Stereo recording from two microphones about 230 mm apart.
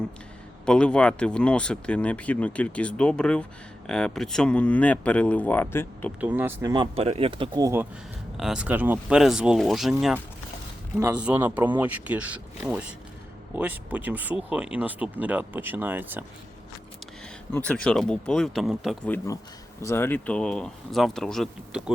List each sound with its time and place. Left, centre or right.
0.6 s speech: centre
6.1 s speech: centre
10.9 s speech: centre
17.5 s speech: centre